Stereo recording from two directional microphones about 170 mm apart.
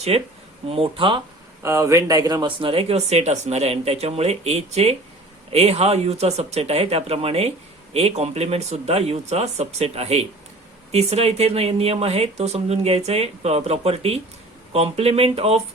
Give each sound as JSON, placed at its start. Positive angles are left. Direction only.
{"t": 0.1, "sound": "speech", "side_deg": -35}
{"t": 1.6, "sound": "speech", "side_deg": -15}